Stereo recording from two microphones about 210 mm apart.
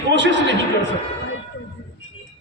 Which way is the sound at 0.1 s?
60° right (ahead or behind).